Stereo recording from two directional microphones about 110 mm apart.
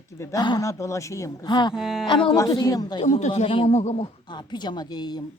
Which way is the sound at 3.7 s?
90° left.